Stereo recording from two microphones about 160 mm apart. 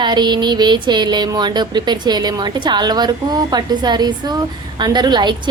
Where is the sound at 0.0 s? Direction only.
25° right (ahead or behind).